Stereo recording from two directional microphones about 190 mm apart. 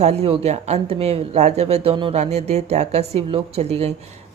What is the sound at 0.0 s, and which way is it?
Speech, 35° right (ahead or behind).